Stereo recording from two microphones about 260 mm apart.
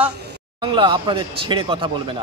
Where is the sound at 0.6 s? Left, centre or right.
Centre.